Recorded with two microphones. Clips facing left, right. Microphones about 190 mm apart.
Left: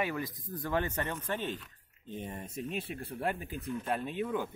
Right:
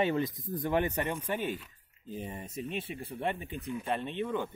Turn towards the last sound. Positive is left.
turn(degrees=5)  # may be behind; listen again after turning